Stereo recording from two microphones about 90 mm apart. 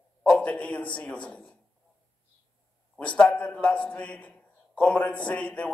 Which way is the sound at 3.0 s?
15° left (ahead or behind).